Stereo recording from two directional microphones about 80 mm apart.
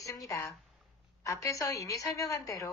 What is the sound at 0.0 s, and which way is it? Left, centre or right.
A woman's voice, left.